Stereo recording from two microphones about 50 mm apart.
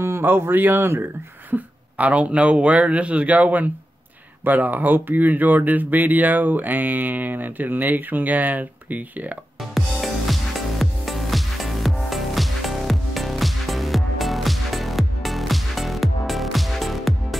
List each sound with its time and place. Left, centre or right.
0.0 s speech: right
1.5 s speech: right
9.6 s music: centre